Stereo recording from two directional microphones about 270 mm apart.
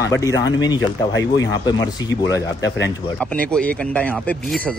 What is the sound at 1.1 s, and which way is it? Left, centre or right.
Speech, left.